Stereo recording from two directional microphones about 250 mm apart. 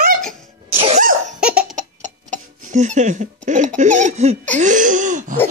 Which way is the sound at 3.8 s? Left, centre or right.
Right.